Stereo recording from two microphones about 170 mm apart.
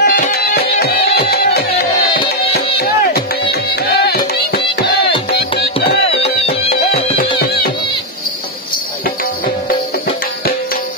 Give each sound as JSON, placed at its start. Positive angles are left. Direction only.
{"t": 0.0, "sound": "music", "side_deg": 65}
{"t": 2.8, "sound": "music", "side_deg": 65}